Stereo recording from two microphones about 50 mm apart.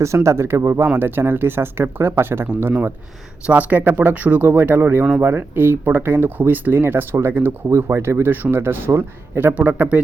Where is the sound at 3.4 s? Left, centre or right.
Right.